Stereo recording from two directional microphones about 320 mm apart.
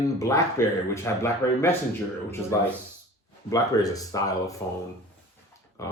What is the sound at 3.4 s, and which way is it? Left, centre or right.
Speech, centre.